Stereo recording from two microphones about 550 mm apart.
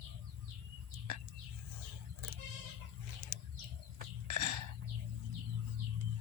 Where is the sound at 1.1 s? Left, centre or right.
Right.